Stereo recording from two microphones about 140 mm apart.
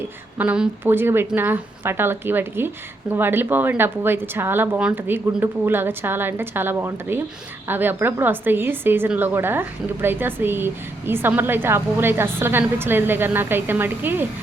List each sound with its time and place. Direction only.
0.3 s a woman's voice: 10° right (ahead or behind)